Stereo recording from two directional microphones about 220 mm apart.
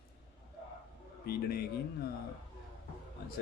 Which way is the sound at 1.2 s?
45° left (ahead or behind).